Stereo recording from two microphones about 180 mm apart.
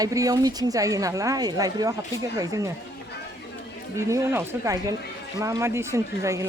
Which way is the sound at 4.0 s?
15° right (ahead or behind).